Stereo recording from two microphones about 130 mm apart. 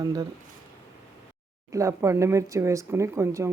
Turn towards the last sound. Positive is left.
turn(degrees=-20)  # may be behind; listen again after turning